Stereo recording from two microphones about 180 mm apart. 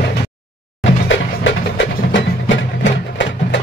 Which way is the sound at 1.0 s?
90° left.